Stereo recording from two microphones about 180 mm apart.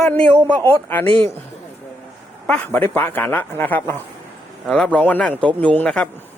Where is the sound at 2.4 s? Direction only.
10° left (ahead or behind).